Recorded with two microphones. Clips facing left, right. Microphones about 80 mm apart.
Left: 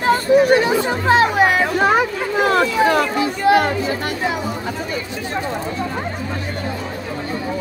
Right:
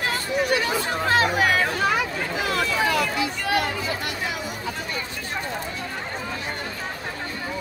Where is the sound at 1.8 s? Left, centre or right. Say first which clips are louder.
Left 7 dB; left.